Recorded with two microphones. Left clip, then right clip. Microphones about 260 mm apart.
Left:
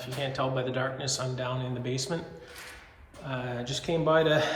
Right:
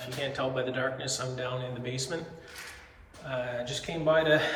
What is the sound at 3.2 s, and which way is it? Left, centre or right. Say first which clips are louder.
A man's voice: right 2 dB; centre.